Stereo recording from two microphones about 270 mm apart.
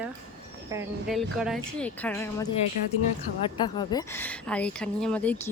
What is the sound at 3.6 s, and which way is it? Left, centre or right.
Speech, centre.